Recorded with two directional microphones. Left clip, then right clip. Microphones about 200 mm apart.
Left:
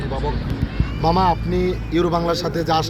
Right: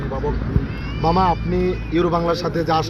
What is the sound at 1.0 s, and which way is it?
A man's voice, 15° left (ahead or behind).